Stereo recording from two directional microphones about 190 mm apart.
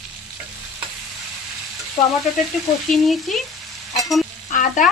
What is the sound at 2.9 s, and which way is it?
Speech, centre (ahead or behind).